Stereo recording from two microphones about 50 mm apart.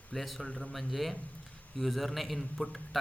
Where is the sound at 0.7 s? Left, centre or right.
Centre.